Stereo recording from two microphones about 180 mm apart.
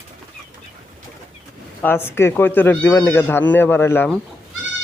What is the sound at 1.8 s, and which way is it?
Speech, 15° left (ahead or behind).